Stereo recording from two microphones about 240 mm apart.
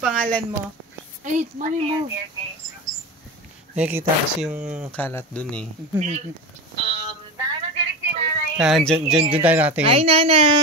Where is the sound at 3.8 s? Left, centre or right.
Centre.